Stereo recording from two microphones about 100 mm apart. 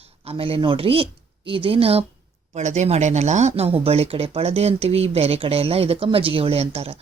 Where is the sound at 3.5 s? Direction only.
75° right (ahead or behind).